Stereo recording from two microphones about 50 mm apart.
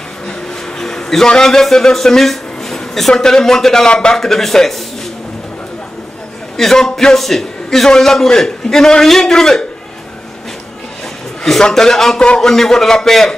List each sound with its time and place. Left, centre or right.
0.7 s a man's voice: centre
4.2 s a man's voice: centre
6.5 s a man's voice: centre
11.4 s a man's voice: centre